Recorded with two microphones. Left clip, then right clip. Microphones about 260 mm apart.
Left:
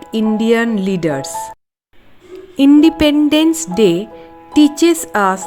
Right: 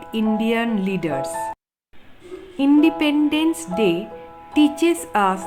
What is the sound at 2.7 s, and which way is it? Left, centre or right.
A woman's voice, left.